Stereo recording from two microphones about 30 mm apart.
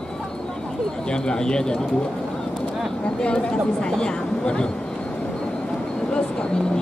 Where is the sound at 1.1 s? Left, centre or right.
Left.